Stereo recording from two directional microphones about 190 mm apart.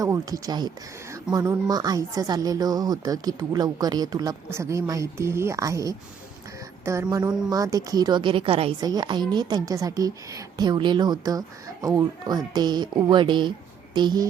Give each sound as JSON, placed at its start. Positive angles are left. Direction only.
{"t": 0.0, "sound": "a woman's voice", "side_deg": -20}